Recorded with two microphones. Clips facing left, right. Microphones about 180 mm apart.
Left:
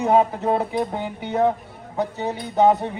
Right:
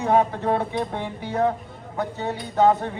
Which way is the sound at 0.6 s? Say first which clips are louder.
Left 2 dB; 5° left (ahead or behind).